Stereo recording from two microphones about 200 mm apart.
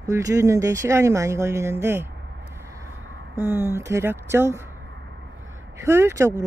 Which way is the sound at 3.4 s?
10° right (ahead or behind).